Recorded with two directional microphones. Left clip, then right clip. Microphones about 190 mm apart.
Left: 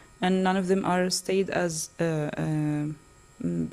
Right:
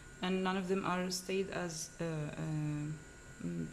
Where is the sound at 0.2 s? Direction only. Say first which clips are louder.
Left 11 dB; 40° left (ahead or behind).